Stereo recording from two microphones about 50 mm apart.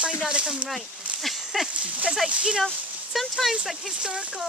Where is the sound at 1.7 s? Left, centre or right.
Right.